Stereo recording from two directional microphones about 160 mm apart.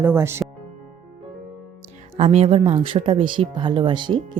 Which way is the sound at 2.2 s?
40° right (ahead or behind).